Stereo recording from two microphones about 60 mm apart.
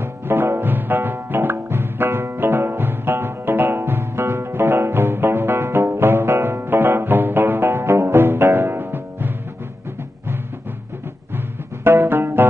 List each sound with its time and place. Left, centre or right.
0.0 s music: right
11.3 s music: right